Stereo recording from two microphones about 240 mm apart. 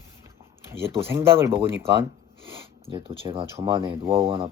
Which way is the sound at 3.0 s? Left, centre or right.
Right.